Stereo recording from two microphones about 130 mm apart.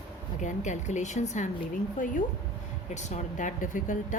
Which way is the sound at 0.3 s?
70° left (ahead or behind).